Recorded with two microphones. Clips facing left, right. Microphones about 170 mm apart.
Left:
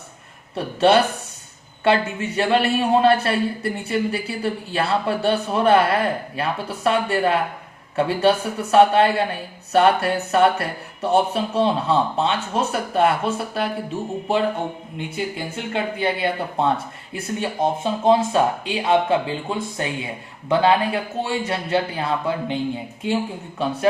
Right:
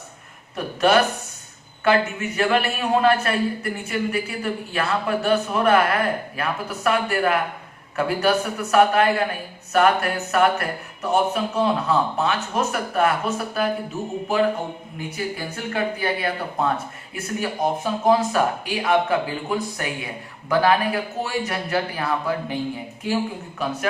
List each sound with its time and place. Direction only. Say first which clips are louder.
0.5 s speech: left 2 dB; 30° left (ahead or behind)